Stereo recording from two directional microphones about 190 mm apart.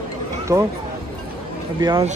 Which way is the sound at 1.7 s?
20° right (ahead or behind).